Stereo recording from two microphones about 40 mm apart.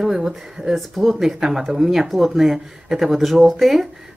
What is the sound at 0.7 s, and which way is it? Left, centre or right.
Speech, centre.